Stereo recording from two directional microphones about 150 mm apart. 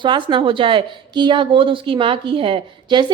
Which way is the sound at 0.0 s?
30° right (ahead or behind).